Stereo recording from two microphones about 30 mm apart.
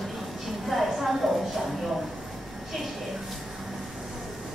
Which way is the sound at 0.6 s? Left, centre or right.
Centre.